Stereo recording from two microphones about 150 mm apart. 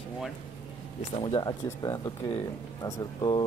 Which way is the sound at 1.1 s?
35° left (ahead or behind).